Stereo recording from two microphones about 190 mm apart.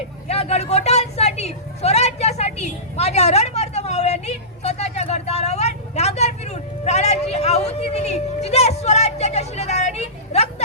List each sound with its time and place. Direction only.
0.3 s a woman's voice: 35° left (ahead or behind)